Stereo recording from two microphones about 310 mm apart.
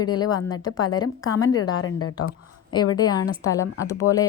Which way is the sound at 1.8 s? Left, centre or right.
Left.